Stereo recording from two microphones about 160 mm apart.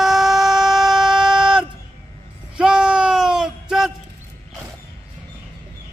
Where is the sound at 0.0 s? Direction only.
Centre (ahead or behind).